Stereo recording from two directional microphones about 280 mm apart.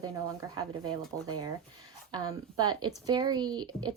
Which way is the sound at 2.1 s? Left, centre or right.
Centre.